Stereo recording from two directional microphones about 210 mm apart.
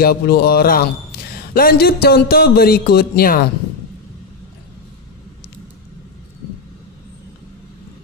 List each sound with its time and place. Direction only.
0.0 s speech: 50° left (ahead or behind)